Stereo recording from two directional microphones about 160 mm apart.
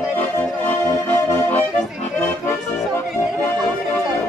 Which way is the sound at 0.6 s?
10° left (ahead or behind).